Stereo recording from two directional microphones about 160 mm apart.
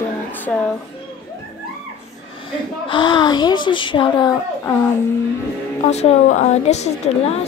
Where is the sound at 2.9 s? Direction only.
30° left (ahead or behind).